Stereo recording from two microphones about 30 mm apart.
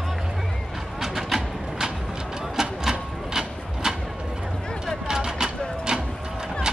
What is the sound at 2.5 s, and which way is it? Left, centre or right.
Printer, centre.